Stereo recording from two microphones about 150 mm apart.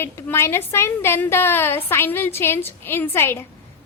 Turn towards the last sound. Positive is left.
turn(degrees=15)  # may be behind; listen again after turning